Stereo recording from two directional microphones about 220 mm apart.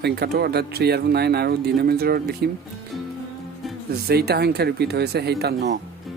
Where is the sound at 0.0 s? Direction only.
45° right (ahead or behind).